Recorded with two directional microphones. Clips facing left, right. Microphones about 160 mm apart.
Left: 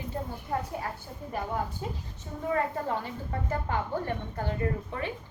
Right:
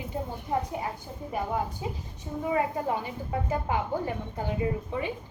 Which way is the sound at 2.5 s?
15° right (ahead or behind).